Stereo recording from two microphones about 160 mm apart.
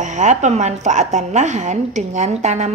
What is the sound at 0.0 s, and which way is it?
A woman's voice, 50° right (ahead or behind).